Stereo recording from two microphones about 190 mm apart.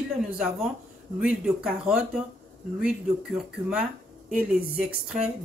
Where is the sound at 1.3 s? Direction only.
5° right (ahead or behind).